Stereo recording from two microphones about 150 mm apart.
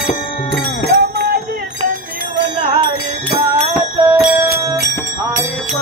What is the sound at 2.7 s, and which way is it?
Music, 35° right (ahead or behind).